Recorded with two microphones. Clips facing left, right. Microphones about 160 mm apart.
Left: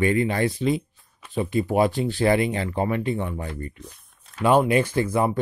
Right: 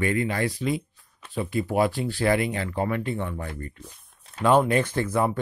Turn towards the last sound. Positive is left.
turn(degrees=10)  # may be behind; listen again after turning